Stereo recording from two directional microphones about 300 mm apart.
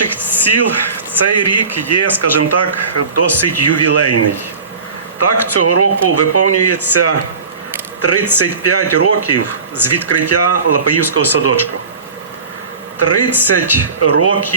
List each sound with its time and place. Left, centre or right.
0.0 s a sound: left
1.2 s speech: left
5.2 s speech: left
13.0 s speech: left